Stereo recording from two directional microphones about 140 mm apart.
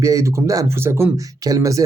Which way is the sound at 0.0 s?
25° right (ahead or behind).